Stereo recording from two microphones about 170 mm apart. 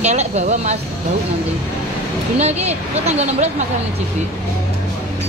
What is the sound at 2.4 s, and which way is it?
Speech, 40° right (ahead or behind).